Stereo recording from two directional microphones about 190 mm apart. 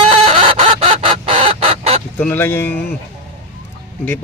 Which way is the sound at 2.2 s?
10° left (ahead or behind).